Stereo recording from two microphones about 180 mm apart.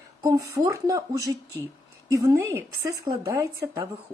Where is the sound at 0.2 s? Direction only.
20° right (ahead or behind).